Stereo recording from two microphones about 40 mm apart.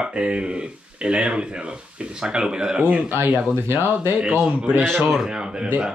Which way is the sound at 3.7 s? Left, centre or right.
Right.